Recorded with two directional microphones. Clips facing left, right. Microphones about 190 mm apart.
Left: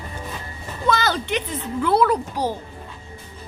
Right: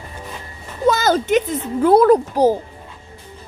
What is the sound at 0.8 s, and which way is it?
A woman's voice, 40° right (ahead or behind).